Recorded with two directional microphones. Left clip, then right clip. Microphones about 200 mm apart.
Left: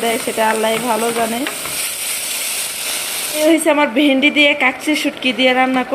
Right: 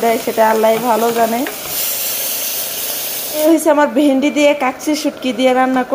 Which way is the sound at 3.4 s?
5° right (ahead or behind).